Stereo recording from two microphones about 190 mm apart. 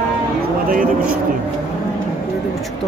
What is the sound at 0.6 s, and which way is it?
Speech, 45° right (ahead or behind).